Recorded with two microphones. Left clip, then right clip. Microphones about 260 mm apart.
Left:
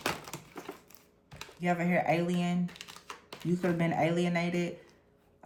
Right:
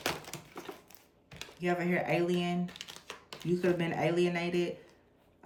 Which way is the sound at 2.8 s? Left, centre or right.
Centre.